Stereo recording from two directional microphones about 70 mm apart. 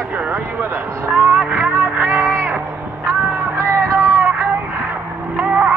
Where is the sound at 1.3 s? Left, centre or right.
Right.